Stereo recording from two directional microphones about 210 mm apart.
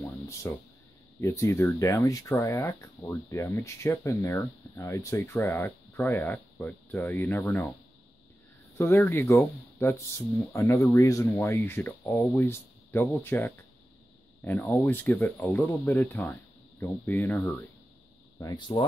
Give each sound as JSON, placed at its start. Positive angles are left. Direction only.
{"t": 0.0, "sound": "a sound", "side_deg": 10}
{"t": 1.2, "sound": "speech", "side_deg": 15}
{"t": 8.7, "sound": "speech", "side_deg": 10}
{"t": 18.4, "sound": "speech", "side_deg": 20}